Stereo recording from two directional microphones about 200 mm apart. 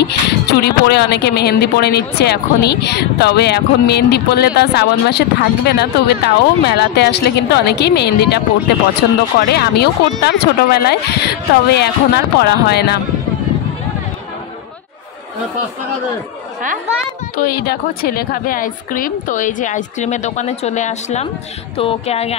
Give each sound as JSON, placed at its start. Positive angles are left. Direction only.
{"t": 0.0, "sound": "speech", "side_deg": 55}
{"t": 17.4, "sound": "a woman's voice", "side_deg": 50}
{"t": 21.7, "sound": "a sound", "side_deg": 30}